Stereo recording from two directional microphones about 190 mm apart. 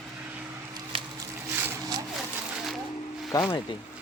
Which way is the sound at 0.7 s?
25° right (ahead or behind).